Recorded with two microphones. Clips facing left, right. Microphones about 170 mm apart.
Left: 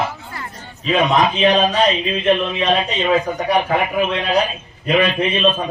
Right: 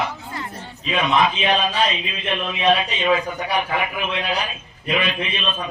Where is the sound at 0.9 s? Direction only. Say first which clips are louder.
Left 4 dB; 35° left (ahead or behind).